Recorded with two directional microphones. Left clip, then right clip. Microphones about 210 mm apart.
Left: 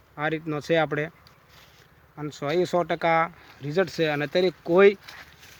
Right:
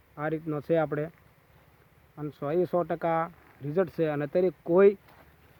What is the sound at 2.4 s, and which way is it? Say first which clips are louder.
Speech: left 3 dB; centre (ahead or behind).